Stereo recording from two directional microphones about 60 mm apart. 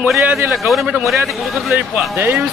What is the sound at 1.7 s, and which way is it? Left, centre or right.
Speech, right.